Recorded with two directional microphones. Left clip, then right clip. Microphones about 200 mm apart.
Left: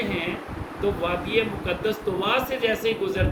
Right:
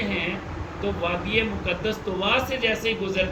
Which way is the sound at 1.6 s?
25° left (ahead or behind).